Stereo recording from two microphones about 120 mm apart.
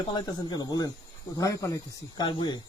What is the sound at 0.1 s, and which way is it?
Speech, 35° left (ahead or behind).